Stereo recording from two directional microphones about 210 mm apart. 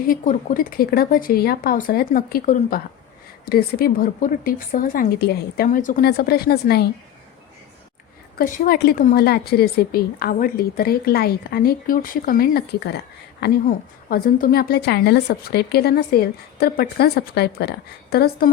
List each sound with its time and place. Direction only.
0.1 s a woman's voice: 40° left (ahead or behind)
8.4 s a woman's voice: 40° left (ahead or behind)